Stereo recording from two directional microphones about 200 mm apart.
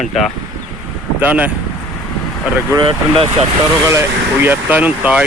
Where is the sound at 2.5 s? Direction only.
15° right (ahead or behind).